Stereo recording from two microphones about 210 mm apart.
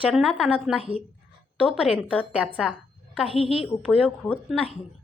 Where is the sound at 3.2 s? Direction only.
25° left (ahead or behind).